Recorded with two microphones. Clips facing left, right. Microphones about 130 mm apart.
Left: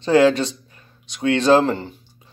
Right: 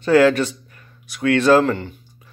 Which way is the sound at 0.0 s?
20° left (ahead or behind).